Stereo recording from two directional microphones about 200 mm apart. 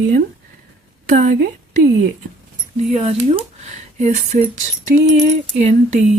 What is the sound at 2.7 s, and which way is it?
Speech, 35° right (ahead or behind).